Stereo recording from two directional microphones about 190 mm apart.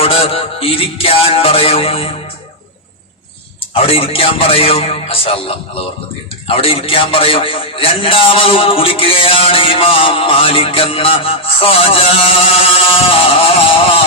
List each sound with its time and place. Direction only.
0.0 s music: 30° left (ahead or behind)
3.8 s a man's voice: 30° left (ahead or behind)